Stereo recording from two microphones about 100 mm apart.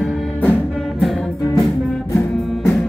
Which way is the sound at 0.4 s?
20° left (ahead or behind).